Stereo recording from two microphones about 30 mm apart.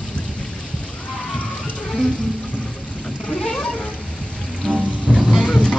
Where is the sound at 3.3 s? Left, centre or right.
Left.